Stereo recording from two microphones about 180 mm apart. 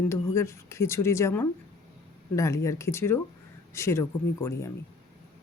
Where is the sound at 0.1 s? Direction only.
15° left (ahead or behind).